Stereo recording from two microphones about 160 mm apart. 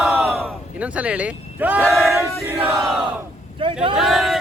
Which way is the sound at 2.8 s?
Centre (ahead or behind).